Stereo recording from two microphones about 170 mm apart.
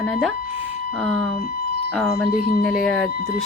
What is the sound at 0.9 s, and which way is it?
A woman's voice, centre (ahead or behind).